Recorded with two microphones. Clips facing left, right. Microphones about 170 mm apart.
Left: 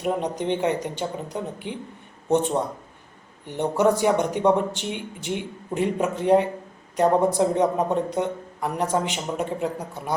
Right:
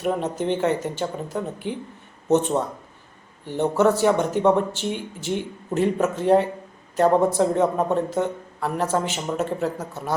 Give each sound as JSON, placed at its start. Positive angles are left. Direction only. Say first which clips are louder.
{"t": 0.0, "sound": "speech", "louder": "right 1 dB", "side_deg": 15}
{"t": 3.4, "sound": "speech", "louder": "right 1 dB", "side_deg": 15}